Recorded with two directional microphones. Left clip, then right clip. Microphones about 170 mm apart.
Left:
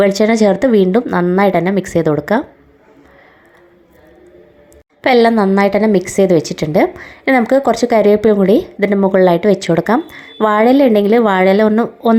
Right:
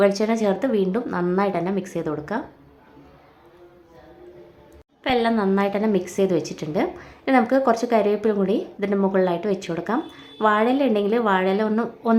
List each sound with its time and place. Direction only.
0.0 s a woman's voice: 40° left (ahead or behind)
5.0 s a woman's voice: 40° left (ahead or behind)
8.9 s speech: 20° left (ahead or behind)
9.1 s a woman's voice: 35° left (ahead or behind)